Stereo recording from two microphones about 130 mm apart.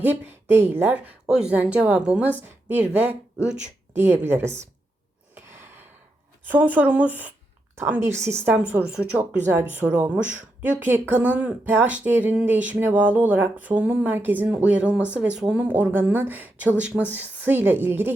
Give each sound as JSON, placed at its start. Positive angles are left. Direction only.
{"t": 0.0, "sound": "speech", "side_deg": -15}
{"t": 3.9, "sound": "speech", "side_deg": -15}
{"t": 5.3, "sound": "gasp", "side_deg": -20}
{"t": 6.5, "sound": "speech", "side_deg": -15}
{"t": 9.8, "sound": "speech", "side_deg": -15}